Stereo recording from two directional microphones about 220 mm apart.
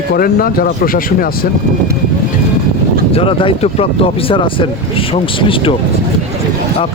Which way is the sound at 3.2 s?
25° left (ahead or behind).